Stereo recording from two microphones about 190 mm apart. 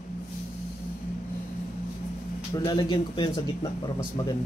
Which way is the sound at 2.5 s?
25° left (ahead or behind).